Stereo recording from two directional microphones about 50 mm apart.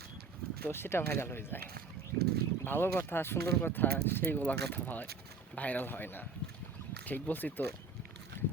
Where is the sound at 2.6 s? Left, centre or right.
Left.